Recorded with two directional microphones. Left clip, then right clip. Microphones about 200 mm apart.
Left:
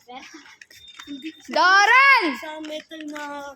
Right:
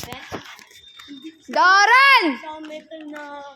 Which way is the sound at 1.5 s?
10° right (ahead or behind).